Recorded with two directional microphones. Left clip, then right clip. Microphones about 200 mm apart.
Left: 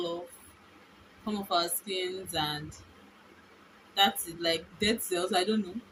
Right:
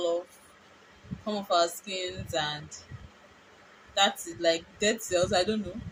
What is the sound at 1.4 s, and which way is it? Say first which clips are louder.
Speech: right 4 dB; 10° right (ahead or behind).